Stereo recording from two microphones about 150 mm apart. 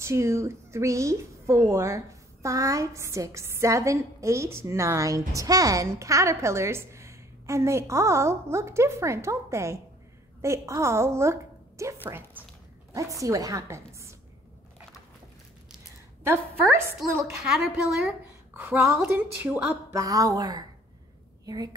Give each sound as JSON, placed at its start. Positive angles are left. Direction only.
{"t": 0.0, "sound": "a woman's voice", "side_deg": -20}
{"t": 17.0, "sound": "a woman's voice", "side_deg": 0}
{"t": 20.0, "sound": "a woman's voice", "side_deg": -25}